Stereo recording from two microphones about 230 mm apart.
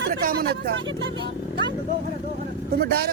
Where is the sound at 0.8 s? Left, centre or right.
Right.